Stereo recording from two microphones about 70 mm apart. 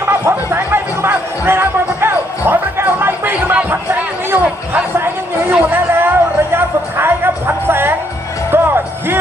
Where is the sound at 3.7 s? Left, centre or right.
Right.